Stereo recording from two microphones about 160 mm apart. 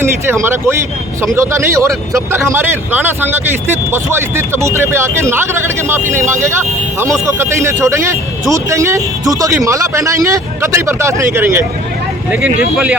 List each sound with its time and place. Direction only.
0.0 s a man's voice: 15° right (ahead or behind)
12.7 s speech: 5° right (ahead or behind)